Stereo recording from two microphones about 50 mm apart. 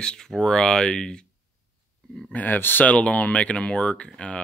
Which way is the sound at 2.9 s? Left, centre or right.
Left.